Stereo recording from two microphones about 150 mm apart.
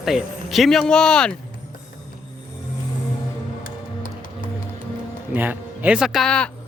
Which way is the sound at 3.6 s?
65° left (ahead or behind).